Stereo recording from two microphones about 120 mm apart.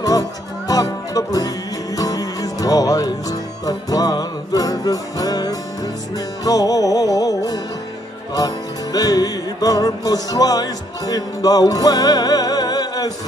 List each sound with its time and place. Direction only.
0.0 s speech: 30° left (ahead or behind)
2.0 s music: 30° left (ahead or behind)
8.9 s music: 30° left (ahead or behind)